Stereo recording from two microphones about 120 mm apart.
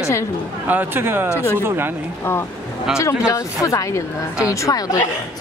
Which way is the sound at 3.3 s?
25° left (ahead or behind).